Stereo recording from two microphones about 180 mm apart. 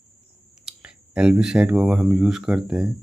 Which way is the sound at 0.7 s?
5° right (ahead or behind).